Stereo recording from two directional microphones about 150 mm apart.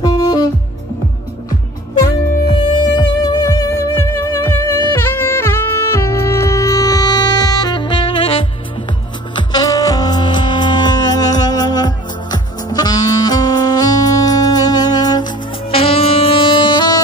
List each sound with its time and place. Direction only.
0.0 s music: 30° left (ahead or behind)
2.0 s music: 35° left (ahead or behind)